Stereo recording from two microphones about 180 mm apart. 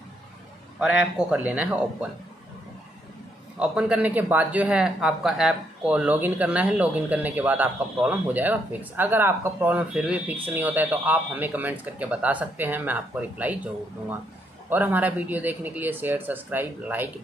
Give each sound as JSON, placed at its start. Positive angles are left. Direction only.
{"t": 0.7, "sound": "a man's voice", "side_deg": -5}
{"t": 3.5, "sound": "a man's voice", "side_deg": -5}
{"t": 14.7, "sound": "a man's voice", "side_deg": -10}